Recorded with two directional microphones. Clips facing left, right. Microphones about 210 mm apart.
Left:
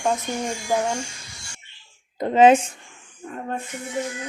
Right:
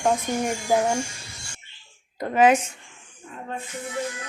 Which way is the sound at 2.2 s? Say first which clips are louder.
Left 4 dB; 25° left (ahead or behind).